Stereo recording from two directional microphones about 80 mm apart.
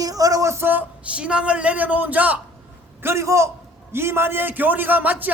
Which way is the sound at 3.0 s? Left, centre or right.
Right.